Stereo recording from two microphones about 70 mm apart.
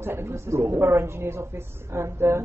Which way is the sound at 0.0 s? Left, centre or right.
Right.